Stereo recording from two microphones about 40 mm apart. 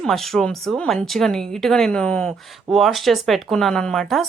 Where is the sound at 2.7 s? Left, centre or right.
Centre.